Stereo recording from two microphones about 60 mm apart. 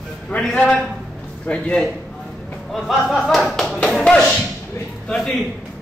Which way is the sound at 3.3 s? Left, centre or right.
Centre.